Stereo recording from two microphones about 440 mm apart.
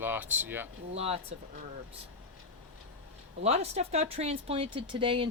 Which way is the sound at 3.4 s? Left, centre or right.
Centre.